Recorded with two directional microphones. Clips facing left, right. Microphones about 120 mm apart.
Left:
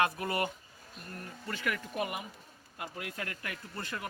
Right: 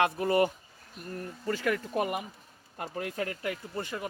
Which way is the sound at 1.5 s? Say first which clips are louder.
Right 7 dB; 40° right (ahead or behind).